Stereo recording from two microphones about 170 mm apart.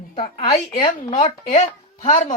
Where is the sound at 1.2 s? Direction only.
40° left (ahead or behind).